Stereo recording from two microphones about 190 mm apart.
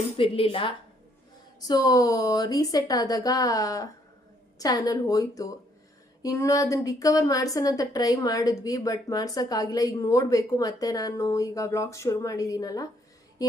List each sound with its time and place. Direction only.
0.2 s a woman's voice: 30° left (ahead or behind)